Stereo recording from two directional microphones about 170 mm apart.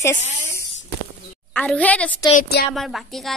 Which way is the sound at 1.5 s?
10° left (ahead or behind).